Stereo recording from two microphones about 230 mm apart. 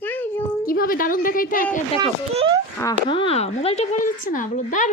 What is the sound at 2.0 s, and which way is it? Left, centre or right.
Speech, right.